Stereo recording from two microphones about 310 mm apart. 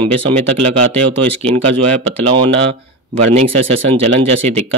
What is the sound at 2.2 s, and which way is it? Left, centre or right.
Speech, centre.